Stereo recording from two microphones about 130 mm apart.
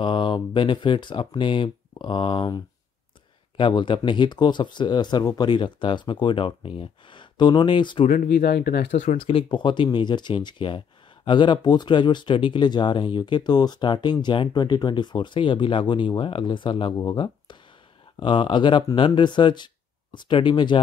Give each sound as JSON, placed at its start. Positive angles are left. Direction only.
{"t": 0.0, "sound": "speech", "side_deg": 40}
{"t": 8.1, "sound": "speech", "side_deg": 90}
{"t": 8.9, "sound": "speech", "side_deg": 80}
{"t": 9.5, "sound": "speech", "side_deg": 40}